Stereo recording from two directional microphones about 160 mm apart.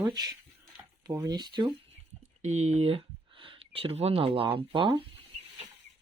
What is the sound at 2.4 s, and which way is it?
Speech, 45° right (ahead or behind).